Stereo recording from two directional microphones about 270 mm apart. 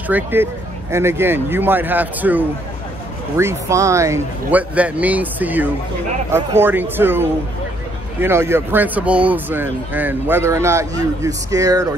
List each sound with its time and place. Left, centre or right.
0.1 s speech: centre